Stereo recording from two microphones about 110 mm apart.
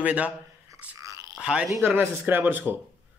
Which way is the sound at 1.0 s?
30° right (ahead or behind).